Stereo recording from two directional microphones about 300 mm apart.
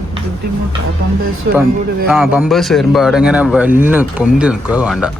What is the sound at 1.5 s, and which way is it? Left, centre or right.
Speech, right.